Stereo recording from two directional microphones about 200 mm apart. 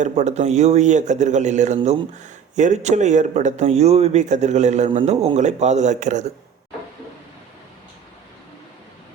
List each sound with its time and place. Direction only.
0.0 s a man's voice: 35° right (ahead or behind)